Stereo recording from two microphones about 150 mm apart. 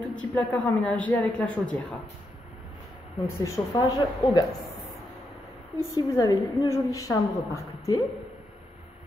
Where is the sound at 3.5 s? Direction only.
25° left (ahead or behind).